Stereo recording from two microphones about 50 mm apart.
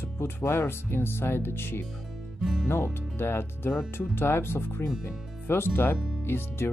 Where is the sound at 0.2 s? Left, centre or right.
Left.